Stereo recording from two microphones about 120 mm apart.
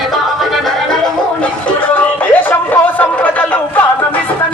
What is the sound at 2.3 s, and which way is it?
Chatter, 15° left (ahead or behind).